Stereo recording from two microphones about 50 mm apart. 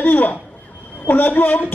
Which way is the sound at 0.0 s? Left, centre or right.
Left.